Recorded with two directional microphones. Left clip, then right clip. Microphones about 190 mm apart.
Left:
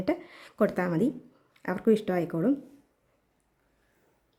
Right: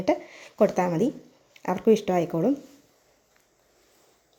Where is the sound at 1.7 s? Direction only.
35° left (ahead or behind).